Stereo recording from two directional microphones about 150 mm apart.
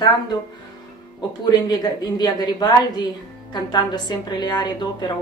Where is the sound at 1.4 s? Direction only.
25° left (ahead or behind).